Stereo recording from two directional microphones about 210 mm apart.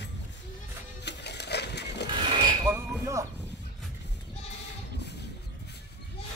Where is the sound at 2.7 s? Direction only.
15° right (ahead or behind).